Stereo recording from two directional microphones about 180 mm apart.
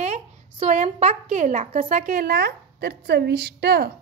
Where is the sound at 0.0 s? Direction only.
40° right (ahead or behind).